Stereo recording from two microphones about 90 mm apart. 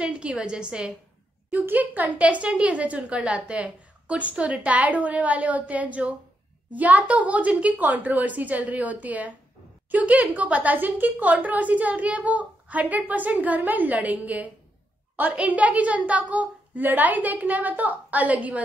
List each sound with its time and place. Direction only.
0.0 s a woman's voice: 10° right (ahead or behind)